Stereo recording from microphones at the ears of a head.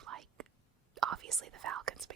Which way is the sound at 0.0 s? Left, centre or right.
Right.